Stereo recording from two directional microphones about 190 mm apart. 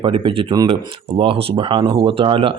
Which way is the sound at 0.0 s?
25° right (ahead or behind).